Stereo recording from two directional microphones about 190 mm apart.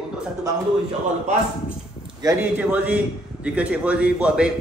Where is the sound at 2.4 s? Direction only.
10° right (ahead or behind).